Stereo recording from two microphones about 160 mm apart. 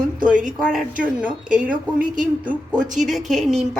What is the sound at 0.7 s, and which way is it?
Speech, 5° right (ahead or behind).